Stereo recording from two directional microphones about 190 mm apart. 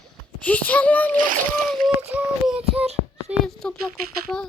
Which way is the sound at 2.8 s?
35° right (ahead or behind).